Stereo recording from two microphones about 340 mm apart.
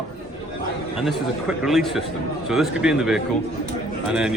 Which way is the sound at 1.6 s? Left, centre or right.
Centre.